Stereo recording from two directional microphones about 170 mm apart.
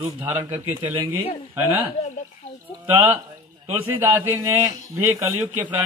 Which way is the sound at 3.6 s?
30° right (ahead or behind).